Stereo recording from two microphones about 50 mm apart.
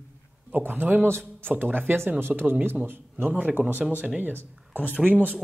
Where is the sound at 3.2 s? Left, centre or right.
Right.